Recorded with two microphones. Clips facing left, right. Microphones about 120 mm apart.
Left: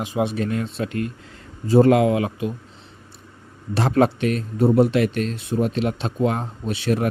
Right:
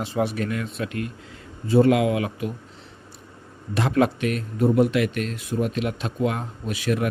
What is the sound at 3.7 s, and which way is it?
A man's voice, 35° left (ahead or behind).